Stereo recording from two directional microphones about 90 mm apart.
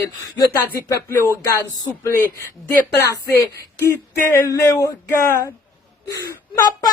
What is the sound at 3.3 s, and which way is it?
Speech, 30° left (ahead or behind).